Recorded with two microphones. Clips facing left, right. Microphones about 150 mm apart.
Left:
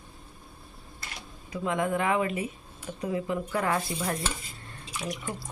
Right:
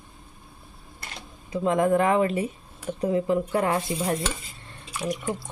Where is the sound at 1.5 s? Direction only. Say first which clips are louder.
Right 7 dB; 35° right (ahead or behind).